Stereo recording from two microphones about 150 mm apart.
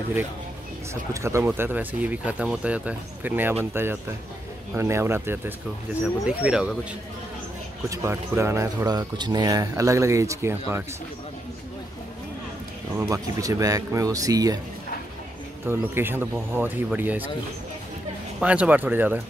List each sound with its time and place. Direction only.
1.2 s speech: 15° right (ahead or behind)
7.9 s speech: 20° right (ahead or behind)
12.9 s speech: 20° right (ahead or behind)
15.6 s speech: 15° right (ahead or behind)
18.4 s speech: 10° right (ahead or behind)